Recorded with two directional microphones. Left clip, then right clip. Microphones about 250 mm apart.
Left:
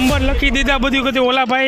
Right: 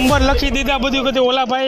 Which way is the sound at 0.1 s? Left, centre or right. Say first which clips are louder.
Right 2 dB; left.